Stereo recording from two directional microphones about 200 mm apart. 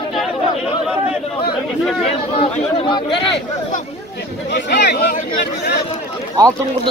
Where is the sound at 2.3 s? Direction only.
25° left (ahead or behind).